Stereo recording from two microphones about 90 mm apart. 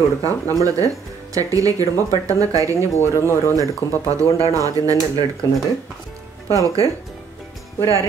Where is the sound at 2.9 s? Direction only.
30° left (ahead or behind).